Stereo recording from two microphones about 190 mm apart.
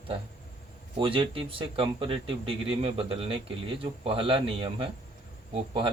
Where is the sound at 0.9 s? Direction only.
25° right (ahead or behind).